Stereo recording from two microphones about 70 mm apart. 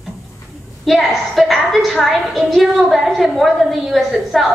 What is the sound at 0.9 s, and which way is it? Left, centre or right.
A woman's voice, centre.